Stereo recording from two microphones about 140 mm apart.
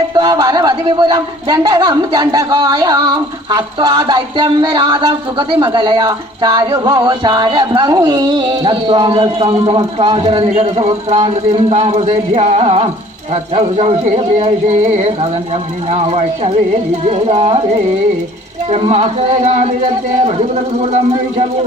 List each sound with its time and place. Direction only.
0.1 s a man's voice: 30° right (ahead or behind); by 12.0 s 50° right (ahead or behind)
12.0 s speech: 35° right (ahead or behind)
12.4 s speech: 45° right (ahead or behind)
18.7 s speech: 45° right (ahead or behind)
20.7 s speech: 50° right (ahead or behind)